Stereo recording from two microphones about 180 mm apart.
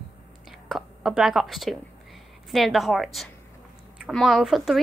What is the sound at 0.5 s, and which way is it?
Speech, centre (ahead or behind).